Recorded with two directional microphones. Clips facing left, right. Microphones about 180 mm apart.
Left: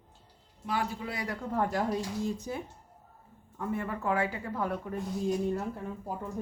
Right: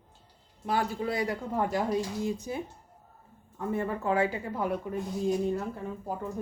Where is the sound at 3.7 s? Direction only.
30° right (ahead or behind).